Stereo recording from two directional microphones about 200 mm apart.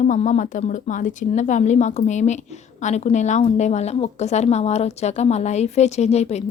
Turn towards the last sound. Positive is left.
turn(degrees=30)  # may be behind; listen again after turning